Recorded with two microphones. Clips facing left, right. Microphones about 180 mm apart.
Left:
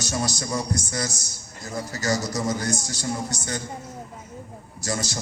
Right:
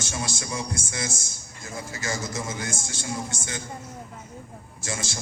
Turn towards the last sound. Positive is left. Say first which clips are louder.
# left 5 dB
turn(degrees=40)  # may be behind; listen again after turning